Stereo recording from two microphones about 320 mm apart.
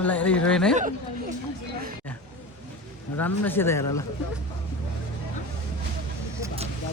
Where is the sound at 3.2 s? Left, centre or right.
Centre.